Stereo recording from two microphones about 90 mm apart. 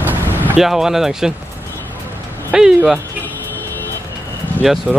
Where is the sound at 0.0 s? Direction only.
20° right (ahead or behind).